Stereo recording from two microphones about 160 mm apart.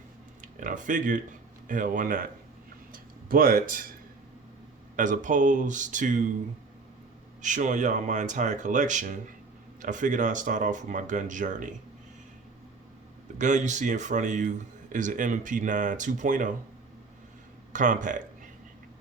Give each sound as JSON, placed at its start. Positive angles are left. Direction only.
{"t": 0.4, "sound": "speech", "side_deg": -55}
{"t": 2.9, "sound": "a sound", "side_deg": -60}
{"t": 4.9, "sound": "speech", "side_deg": -50}
{"t": 7.4, "sound": "speech", "side_deg": -50}
{"t": 13.4, "sound": "speech", "side_deg": -50}
{"t": 17.7, "sound": "speech", "side_deg": -50}